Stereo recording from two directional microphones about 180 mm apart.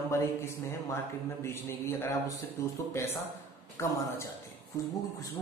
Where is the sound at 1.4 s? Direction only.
15° left (ahead or behind).